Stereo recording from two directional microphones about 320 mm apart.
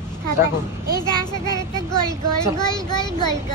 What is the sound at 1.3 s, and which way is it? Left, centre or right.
Speech, centre.